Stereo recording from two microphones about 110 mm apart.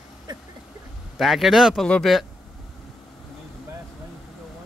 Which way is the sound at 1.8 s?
10° left (ahead or behind).